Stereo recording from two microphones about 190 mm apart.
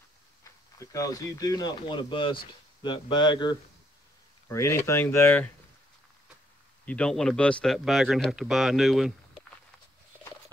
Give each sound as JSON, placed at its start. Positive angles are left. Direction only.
{"t": 0.4, "sound": "speech", "side_deg": 15}
{"t": 6.9, "sound": "speech", "side_deg": 5}